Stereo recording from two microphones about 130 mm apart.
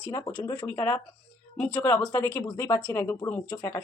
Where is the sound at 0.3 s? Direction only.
35° left (ahead or behind).